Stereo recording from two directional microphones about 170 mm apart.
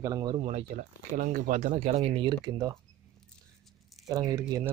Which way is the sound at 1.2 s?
50° right (ahead or behind).